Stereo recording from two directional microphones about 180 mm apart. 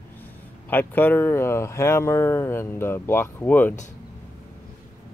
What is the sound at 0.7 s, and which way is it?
Speech, 10° left (ahead or behind).